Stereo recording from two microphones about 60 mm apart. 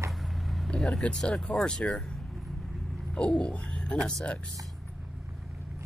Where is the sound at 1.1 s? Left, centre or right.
Centre.